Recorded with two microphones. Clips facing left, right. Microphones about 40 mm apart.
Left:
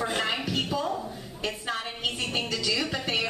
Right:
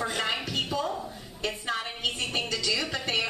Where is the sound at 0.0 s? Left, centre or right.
Centre.